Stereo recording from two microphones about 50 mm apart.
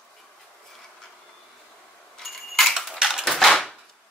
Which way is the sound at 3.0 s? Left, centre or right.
Centre.